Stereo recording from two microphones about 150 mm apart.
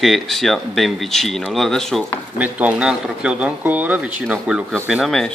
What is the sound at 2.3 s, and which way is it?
Speech, 10° right (ahead or behind).